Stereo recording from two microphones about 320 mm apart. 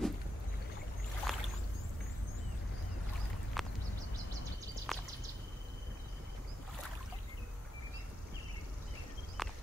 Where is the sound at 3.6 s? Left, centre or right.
Centre.